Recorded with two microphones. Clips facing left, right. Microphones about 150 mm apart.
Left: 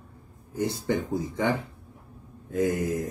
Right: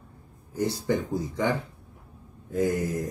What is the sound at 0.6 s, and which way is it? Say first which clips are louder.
Speech: right 1 dB; 25° left (ahead or behind).